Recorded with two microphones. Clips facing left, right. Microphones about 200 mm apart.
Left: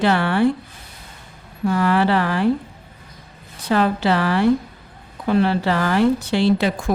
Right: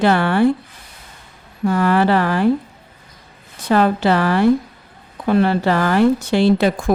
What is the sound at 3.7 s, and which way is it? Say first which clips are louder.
A woman's voice: right 3 dB; 45° right (ahead or behind).